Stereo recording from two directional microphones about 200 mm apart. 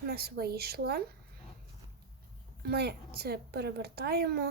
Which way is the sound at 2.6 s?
55° right (ahead or behind).